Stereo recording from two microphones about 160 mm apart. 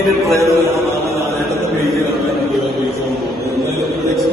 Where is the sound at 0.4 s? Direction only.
20° right (ahead or behind).